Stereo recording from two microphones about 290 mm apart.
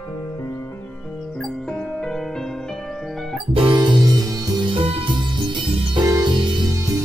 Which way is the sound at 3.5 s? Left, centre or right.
Centre.